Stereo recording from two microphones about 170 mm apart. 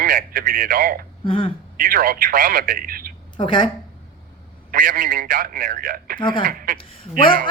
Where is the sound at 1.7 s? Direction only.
60° right (ahead or behind).